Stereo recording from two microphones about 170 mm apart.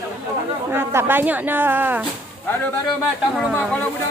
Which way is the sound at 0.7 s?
15° right (ahead or behind).